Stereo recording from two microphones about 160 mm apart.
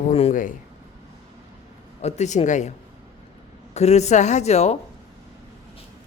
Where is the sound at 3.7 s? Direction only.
45° left (ahead or behind).